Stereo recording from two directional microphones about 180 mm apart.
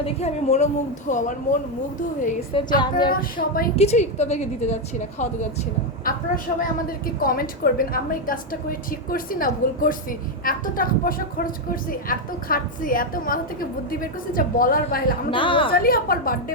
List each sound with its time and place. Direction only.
0.0 s a woman's voice: 35° left (ahead or behind)
2.7 s a woman's voice: 25° left (ahead or behind)
3.1 s a woman's voice: 50° left (ahead or behind)
3.8 s a woman's voice: 35° left (ahead or behind)
15.3 s a woman's voice: 30° left (ahead or behind)
15.7 s a woman's voice: 55° left (ahead or behind)